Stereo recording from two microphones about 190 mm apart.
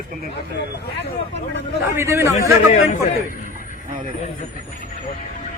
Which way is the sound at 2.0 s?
15° right (ahead or behind).